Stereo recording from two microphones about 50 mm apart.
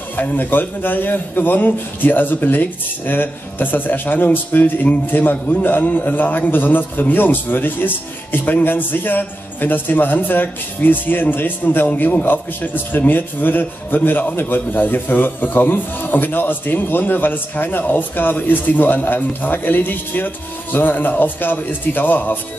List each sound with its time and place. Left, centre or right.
0.1 s a man's voice: left